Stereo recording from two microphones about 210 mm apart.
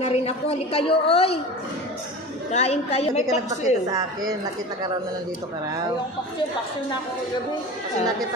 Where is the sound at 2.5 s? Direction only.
30° left (ahead or behind).